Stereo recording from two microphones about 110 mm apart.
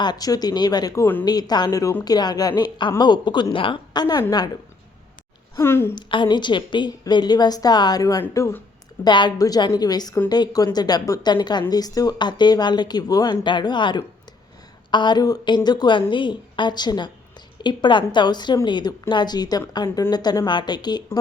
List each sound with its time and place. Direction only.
0.0 s a woman's voice: 40° left (ahead or behind)
1.8 s speech: 25° left (ahead or behind)
2.0 s a woman's voice: 40° left (ahead or behind)
5.5 s speech: 20° left (ahead or behind)
5.9 s a woman's voice: 45° left (ahead or behind); by 8.5 s 30° left (ahead or behind)
9.0 s a woman's voice: 45° left (ahead or behind)